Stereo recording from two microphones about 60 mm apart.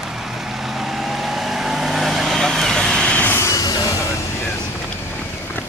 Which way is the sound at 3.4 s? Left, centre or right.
Left.